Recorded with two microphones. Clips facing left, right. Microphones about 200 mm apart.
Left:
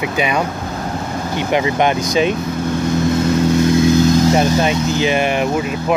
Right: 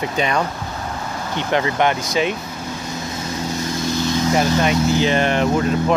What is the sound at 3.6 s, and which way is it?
Vehicle, 55° left (ahead or behind).